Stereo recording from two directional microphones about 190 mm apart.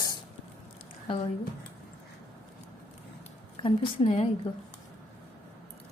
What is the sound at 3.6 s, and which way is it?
Speech, 30° left (ahead or behind).